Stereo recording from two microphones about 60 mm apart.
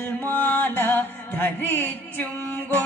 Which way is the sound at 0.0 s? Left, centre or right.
Left.